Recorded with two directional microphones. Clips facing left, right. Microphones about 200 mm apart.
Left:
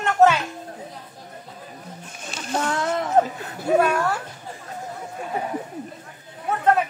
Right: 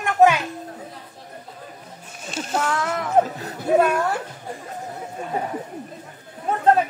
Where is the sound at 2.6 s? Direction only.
30° left (ahead or behind).